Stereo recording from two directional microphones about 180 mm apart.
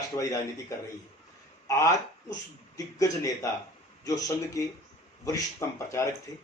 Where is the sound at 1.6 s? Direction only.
20° left (ahead or behind).